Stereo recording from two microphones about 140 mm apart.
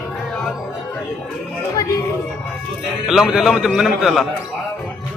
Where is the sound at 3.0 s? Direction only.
Centre (ahead or behind).